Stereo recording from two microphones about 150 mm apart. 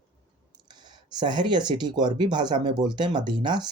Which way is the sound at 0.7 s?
30° right (ahead or behind).